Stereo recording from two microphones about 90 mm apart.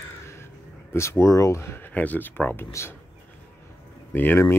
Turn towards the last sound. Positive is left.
turn(degrees=25)  # may be behind; listen again after turning